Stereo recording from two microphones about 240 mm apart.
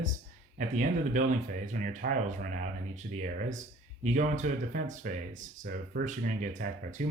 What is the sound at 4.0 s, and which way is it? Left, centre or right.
Speech, right.